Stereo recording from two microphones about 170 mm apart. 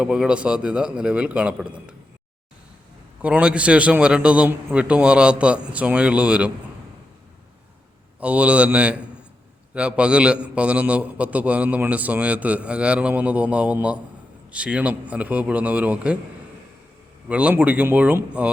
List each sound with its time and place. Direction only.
0.0 s a man's voice: 5° right (ahead or behind)
3.2 s a man's voice: 5° right (ahead or behind)
8.2 s a man's voice: 5° right (ahead or behind)
17.2 s a man's voice: 10° right (ahead or behind)